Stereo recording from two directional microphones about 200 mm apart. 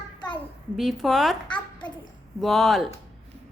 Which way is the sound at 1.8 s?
5° left (ahead or behind).